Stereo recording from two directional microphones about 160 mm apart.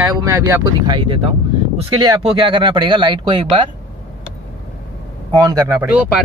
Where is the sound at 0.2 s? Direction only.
20° right (ahead or behind).